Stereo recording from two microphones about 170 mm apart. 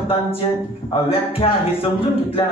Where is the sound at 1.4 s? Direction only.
30° left (ahead or behind).